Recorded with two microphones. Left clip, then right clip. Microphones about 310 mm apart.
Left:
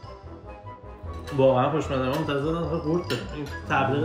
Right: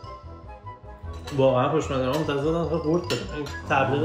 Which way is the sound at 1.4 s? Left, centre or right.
Centre.